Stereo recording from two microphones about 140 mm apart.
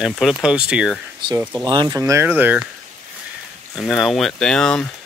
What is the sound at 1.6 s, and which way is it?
Speech, 30° right (ahead or behind).